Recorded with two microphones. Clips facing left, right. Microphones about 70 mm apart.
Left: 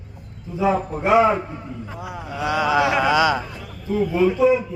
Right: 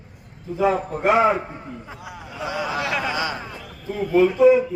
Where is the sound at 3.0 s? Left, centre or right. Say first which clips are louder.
Left 8 dB; left.